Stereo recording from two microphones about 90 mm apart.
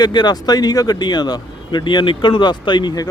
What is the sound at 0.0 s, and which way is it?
Speech, 55° left (ahead or behind).